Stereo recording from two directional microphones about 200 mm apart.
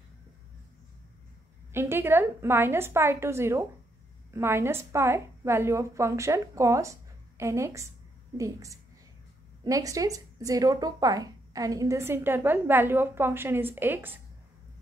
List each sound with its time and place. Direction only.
1.7 s speech: 10° right (ahead or behind)